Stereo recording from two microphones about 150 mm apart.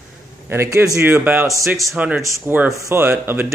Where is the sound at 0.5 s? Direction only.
20° right (ahead or behind).